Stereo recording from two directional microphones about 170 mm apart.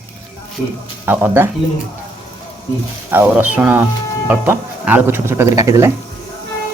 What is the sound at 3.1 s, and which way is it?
Speech, 10° right (ahead or behind).